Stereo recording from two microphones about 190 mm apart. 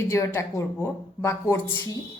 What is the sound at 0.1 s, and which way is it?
A woman's voice, 15° left (ahead or behind).